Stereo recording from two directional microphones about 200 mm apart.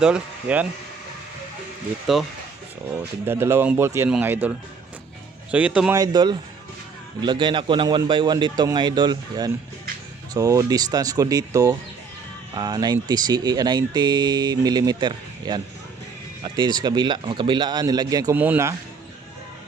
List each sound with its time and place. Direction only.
0.0 s speech: 5° right (ahead or behind)
2.1 s speech: centre (ahead or behind)
3.2 s speech: 15° right (ahead or behind)
6.0 s speech: 20° right (ahead or behind)